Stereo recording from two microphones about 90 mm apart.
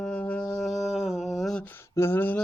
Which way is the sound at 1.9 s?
25° left (ahead or behind).